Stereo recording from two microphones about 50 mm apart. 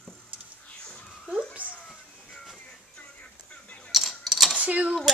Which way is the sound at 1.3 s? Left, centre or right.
Right.